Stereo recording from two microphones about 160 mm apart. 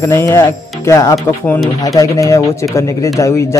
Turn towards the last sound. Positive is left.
turn(degrees=20)  # may be behind; listen again after turning